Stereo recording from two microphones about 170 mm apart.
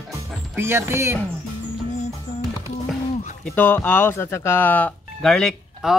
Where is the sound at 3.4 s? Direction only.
10° left (ahead or behind).